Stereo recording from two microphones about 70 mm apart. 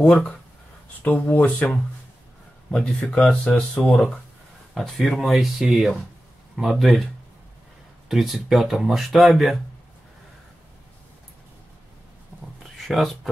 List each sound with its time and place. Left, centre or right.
0.0 s speech: centre
4.7 s speech: centre
8.1 s speech: centre
12.8 s speech: centre